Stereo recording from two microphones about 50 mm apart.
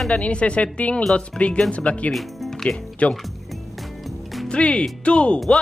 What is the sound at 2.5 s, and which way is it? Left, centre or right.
Music, centre.